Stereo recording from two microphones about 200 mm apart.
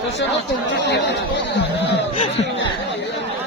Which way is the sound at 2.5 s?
65° left (ahead or behind).